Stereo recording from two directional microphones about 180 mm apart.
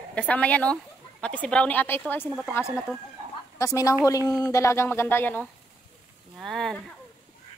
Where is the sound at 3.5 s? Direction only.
20° left (ahead or behind); by 6.8 s centre (ahead or behind).